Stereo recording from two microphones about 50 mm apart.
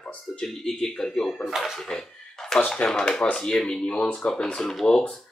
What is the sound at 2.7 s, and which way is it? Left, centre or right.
Speech, centre.